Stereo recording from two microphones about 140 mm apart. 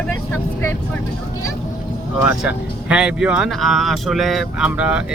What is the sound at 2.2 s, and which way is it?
Speech, 10° right (ahead or behind).